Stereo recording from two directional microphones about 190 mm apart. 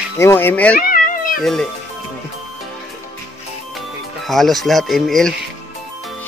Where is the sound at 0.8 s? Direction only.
50° left (ahead or behind).